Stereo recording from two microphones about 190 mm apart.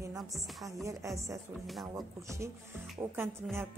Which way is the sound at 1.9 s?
15° right (ahead or behind).